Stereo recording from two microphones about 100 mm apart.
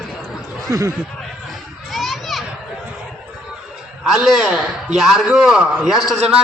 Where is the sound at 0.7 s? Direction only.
35° right (ahead or behind).